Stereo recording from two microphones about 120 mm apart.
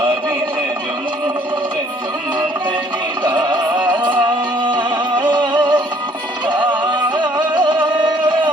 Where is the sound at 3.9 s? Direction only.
40° right (ahead or behind).